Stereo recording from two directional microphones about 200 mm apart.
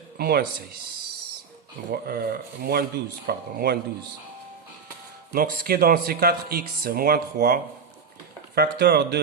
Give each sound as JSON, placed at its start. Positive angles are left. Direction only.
{"t": 0.2, "sound": "speech", "side_deg": -50}
{"t": 1.9, "sound": "speech", "side_deg": -50}
{"t": 5.3, "sound": "speech", "side_deg": -50}